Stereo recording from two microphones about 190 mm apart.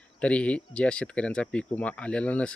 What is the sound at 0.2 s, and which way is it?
Speech, 5° left (ahead or behind).